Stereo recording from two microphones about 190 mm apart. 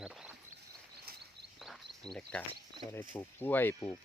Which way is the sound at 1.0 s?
60° right (ahead or behind).